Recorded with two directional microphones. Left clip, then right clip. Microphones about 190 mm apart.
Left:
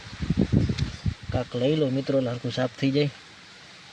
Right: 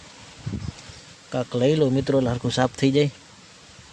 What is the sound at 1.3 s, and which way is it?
Speech, 20° right (ahead or behind).